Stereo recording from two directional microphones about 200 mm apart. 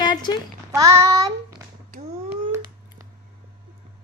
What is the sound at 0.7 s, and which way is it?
Child singing, 15° right (ahead or behind).